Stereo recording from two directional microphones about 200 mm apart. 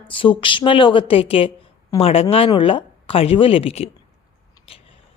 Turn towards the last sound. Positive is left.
turn(degrees=30)  # may be behind; listen again after turning